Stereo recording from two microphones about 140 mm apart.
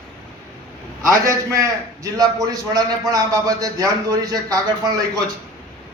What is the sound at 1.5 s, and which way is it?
A man's voice, 25° right (ahead or behind).